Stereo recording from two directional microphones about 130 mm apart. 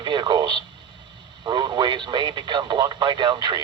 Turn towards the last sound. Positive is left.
turn(degrees=-35)  # may be behind; listen again after turning